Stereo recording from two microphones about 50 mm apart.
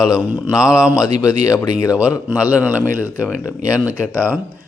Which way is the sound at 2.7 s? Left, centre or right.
Right.